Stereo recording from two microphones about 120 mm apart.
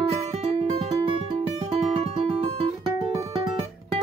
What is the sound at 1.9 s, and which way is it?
Music, 55° right (ahead or behind).